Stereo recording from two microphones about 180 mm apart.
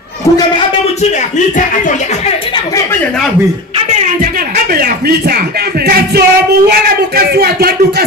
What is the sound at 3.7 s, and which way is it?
Speech, 40° right (ahead or behind).